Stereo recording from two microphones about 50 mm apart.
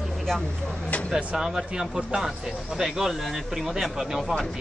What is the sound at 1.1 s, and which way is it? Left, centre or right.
Speech, centre.